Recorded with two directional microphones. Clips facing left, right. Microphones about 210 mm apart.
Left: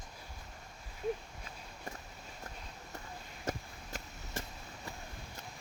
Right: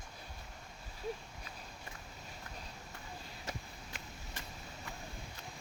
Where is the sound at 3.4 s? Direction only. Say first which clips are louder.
Left 8 dB; 45° left (ahead or behind).